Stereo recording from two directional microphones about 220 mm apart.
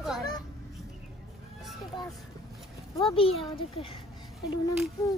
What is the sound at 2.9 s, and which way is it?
A child's voice, 25° left (ahead or behind).